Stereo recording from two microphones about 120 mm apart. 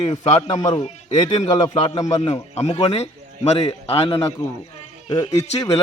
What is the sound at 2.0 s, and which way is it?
Speech, 30° left (ahead or behind).